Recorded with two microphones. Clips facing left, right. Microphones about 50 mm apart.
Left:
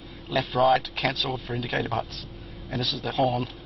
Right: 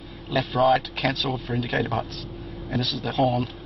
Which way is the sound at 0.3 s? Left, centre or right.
Centre.